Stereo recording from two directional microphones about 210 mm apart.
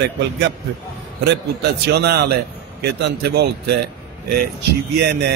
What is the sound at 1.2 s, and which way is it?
A man's voice, 55° right (ahead or behind).